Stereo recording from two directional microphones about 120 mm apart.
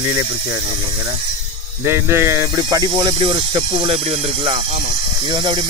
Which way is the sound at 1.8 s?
20° right (ahead or behind).